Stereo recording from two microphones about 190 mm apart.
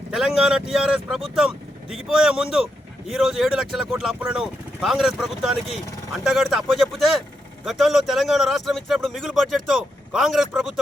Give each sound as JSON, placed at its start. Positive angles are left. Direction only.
{"t": 0.1, "sound": "speech", "side_deg": 0}